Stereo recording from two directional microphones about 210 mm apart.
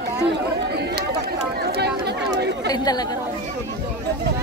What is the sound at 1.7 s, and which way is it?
Run, 50° right (ahead or behind).